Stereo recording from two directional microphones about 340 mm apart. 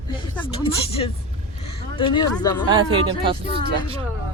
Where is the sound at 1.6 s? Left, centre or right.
Centre.